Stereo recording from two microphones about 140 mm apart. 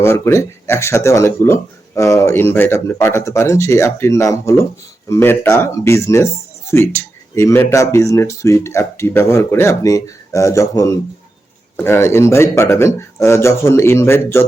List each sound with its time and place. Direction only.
0.0 s speech: 20° left (ahead or behind)